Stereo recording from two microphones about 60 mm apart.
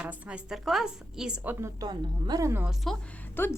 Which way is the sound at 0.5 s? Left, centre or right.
Centre.